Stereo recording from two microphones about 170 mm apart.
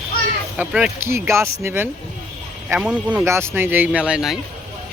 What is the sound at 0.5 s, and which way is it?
Speech, 5° right (ahead or behind).